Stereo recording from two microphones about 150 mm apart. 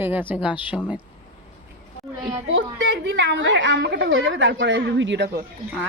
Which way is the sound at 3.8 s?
90° right.